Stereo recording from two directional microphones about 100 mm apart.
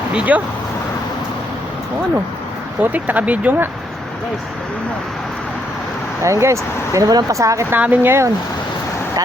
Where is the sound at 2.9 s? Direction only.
15° right (ahead or behind).